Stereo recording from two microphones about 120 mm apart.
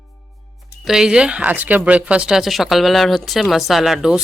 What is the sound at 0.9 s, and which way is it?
Speech, 5° right (ahead or behind).